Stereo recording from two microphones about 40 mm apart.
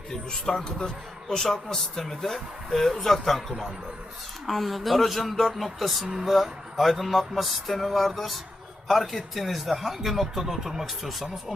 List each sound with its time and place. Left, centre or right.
0.1 s speech: centre
4.4 s speech: centre